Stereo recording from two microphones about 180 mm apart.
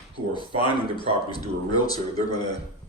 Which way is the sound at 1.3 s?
20° left (ahead or behind).